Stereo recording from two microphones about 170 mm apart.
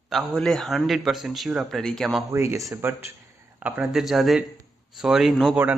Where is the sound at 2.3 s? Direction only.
15° right (ahead or behind).